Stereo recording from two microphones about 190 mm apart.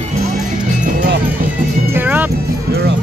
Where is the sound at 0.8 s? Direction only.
45° right (ahead or behind).